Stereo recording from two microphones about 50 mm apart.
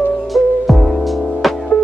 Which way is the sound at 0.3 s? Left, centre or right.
Centre.